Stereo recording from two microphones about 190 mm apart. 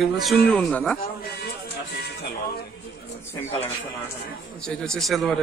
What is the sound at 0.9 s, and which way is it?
Speech, 55° left (ahead or behind).